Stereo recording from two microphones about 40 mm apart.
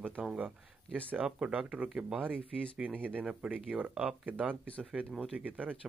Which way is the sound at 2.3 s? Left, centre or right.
Left.